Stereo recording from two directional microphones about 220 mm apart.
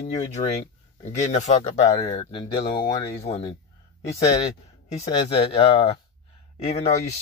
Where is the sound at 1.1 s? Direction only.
30° left (ahead or behind).